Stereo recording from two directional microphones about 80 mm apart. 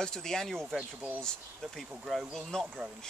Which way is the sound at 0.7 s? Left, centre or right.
Centre.